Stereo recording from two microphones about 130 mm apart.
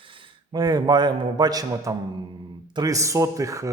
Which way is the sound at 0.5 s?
30° right (ahead or behind).